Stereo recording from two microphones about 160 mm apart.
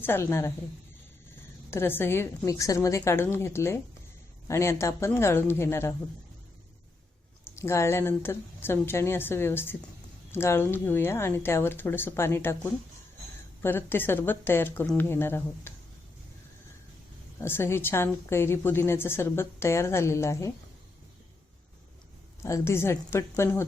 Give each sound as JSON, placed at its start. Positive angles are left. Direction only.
{"t": 0.0, "sound": "a woman's voice", "side_deg": 15}
{"t": 1.7, "sound": "a woman's voice", "side_deg": 15}
{"t": 7.6, "sound": "a woman's voice", "side_deg": 15}
{"t": 13.6, "sound": "a woman's voice", "side_deg": 15}
{"t": 17.4, "sound": "a woman's voice", "side_deg": 15}
{"t": 22.4, "sound": "a woman's voice", "side_deg": 20}